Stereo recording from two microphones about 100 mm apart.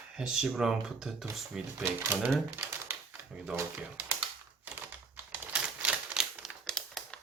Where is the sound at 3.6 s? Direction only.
25° right (ahead or behind).